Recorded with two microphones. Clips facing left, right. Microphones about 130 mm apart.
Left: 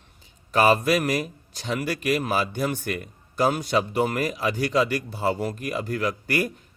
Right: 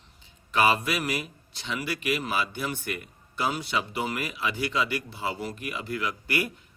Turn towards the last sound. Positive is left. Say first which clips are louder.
# left 4 dB
turn(degrees=40)  # may be behind; listen again after turning